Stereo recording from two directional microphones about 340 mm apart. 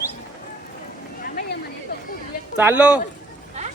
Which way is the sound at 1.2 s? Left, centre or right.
Left.